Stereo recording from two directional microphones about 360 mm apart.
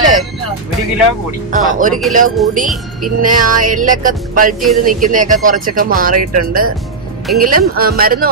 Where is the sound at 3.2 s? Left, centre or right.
Right.